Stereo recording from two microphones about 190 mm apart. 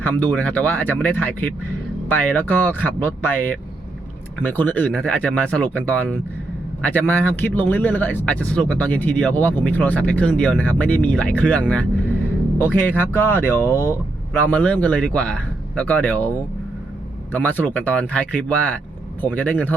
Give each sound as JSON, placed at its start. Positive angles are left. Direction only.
{"t": 0.0, "sound": "speech", "side_deg": 10}
{"t": 13.7, "sound": "speech", "side_deg": -10}
{"t": 14.5, "sound": "speech", "side_deg": 5}
{"t": 17.3, "sound": "speech", "side_deg": 10}